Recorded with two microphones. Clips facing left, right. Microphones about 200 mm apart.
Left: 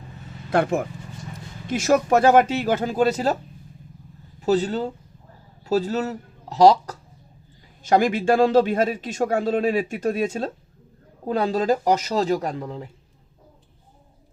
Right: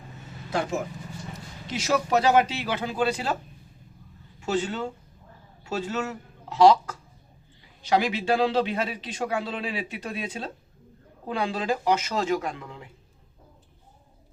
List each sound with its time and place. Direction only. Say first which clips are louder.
0.5 s a man's voice: left 7 dB; 60° left (ahead or behind); by 3.3 s 40° left (ahead or behind)
4.4 s a man's voice: left 6 dB; 35° left (ahead or behind)
7.9 s a man's voice: left 5 dB; 50° left (ahead or behind)